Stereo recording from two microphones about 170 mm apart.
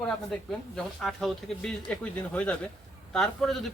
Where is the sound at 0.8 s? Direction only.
Centre (ahead or behind).